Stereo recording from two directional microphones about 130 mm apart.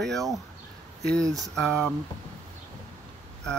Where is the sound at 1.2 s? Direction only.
25° right (ahead or behind).